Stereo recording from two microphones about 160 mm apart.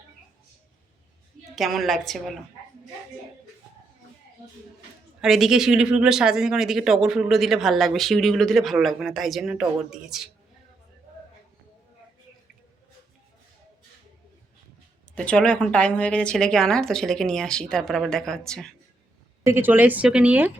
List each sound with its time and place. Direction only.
1.5 s speech: centre (ahead or behind)
5.2 s speech: 5° right (ahead or behind)
15.1 s speech: 5° left (ahead or behind)
19.5 s speech: 15° right (ahead or behind)